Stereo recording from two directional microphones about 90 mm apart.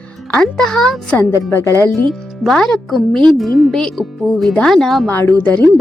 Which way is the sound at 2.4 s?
5° left (ahead or behind).